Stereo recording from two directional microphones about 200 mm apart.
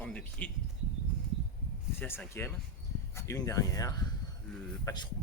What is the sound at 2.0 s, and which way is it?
Speech, 10° left (ahead or behind).